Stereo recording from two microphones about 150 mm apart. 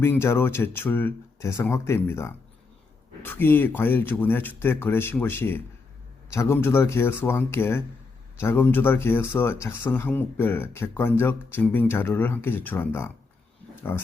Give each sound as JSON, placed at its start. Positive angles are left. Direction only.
{"t": 0.0, "sound": "speech", "side_deg": 15}